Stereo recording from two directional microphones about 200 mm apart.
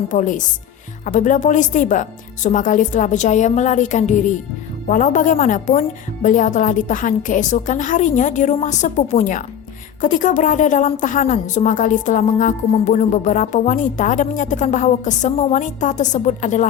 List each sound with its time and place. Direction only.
0.1 s a woman's voice: 40° left (ahead or behind)